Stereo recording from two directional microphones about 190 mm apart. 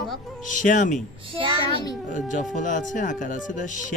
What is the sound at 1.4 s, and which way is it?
Child singing, 25° right (ahead or behind).